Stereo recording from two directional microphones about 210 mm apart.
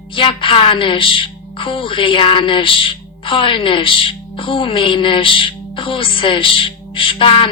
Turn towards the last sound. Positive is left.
turn(degrees=25)  # may be behind; listen again after turning